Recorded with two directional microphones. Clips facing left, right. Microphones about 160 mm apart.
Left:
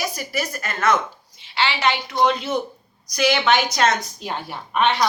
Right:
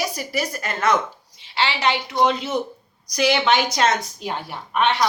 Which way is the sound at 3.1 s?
30° right (ahead or behind).